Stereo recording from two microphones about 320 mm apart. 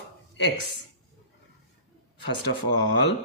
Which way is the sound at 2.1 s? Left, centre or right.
Left.